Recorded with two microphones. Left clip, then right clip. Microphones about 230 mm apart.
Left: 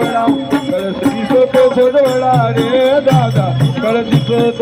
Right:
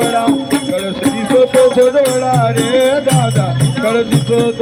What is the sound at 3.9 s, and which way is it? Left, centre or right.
Music, left.